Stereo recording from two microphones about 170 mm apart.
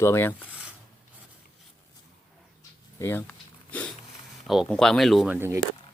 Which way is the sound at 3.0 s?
10° left (ahead or behind).